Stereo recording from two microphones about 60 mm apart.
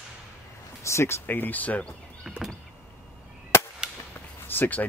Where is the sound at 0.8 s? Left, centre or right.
Left.